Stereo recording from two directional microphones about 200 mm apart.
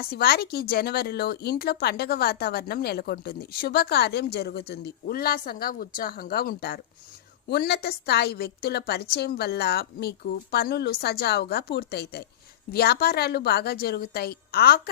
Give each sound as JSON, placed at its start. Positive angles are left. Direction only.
{"t": 0.1, "sound": "a woman's voice", "side_deg": 50}